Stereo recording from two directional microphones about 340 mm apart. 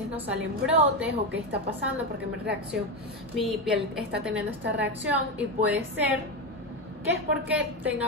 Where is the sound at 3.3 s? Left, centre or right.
Centre.